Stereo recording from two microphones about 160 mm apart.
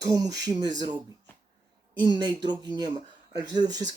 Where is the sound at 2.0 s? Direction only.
25° right (ahead or behind).